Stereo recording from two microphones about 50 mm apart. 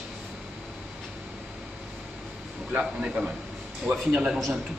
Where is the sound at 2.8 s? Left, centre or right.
Centre.